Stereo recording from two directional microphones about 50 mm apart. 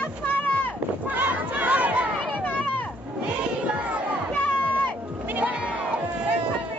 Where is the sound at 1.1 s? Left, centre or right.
Right.